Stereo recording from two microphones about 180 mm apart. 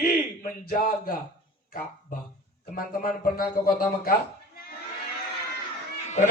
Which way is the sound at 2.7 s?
55° left (ahead or behind).